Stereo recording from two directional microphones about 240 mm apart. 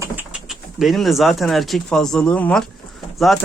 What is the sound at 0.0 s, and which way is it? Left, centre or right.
Speech, centre.